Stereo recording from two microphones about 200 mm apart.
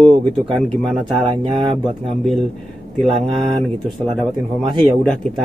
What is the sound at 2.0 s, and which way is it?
Speech, centre (ahead or behind).